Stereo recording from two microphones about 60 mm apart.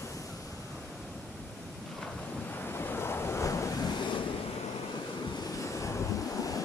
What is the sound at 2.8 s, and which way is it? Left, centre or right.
Waves, left.